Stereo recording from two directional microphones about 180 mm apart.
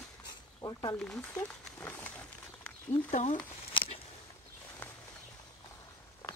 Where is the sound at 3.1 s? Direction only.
40° left (ahead or behind).